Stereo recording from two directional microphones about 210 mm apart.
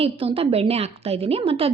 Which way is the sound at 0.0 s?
25° right (ahead or behind).